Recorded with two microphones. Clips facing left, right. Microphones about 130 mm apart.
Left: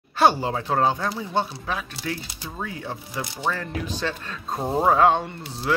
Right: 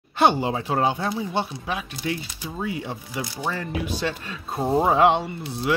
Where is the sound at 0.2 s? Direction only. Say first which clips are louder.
Even; 15° right (ahead or behind).